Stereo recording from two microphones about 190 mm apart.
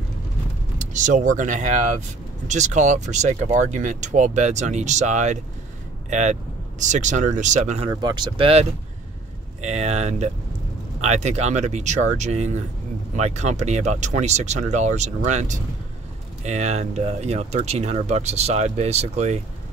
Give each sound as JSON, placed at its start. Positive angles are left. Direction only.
{"t": 0.7, "sound": "speech", "side_deg": -40}
{"t": 7.9, "sound": "speech", "side_deg": -20}